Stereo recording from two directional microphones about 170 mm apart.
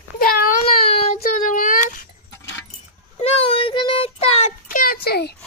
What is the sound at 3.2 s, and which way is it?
Child singing, 35° left (ahead or behind).